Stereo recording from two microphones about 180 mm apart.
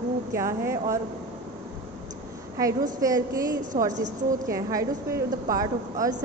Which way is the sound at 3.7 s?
50° right (ahead or behind).